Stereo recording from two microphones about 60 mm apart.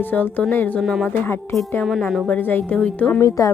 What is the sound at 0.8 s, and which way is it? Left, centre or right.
Music, centre.